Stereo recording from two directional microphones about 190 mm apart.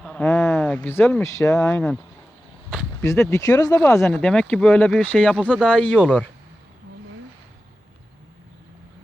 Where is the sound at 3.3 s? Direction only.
15° left (ahead or behind).